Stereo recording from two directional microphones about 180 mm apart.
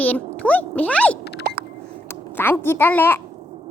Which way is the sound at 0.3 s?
10° left (ahead or behind).